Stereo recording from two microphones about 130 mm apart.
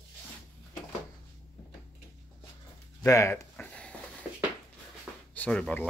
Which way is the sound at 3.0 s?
25° left (ahead or behind).